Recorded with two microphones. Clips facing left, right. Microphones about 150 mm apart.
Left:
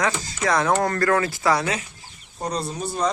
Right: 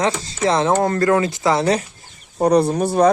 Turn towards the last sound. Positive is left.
turn(degrees=-65)  # may be behind; listen again after turning